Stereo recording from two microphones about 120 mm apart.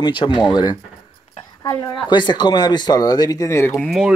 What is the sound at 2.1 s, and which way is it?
Speech, 40° left (ahead or behind).